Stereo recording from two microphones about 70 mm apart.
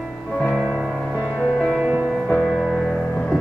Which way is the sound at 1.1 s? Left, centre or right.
Centre.